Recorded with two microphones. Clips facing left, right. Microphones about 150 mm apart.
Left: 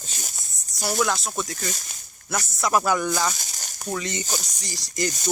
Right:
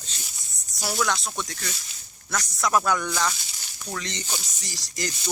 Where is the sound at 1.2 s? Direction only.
5° left (ahead or behind).